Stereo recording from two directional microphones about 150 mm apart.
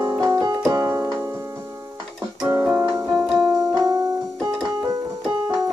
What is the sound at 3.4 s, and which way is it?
Keyboard, 25° right (ahead or behind).